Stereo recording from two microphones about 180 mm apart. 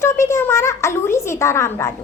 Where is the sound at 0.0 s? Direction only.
15° left (ahead or behind).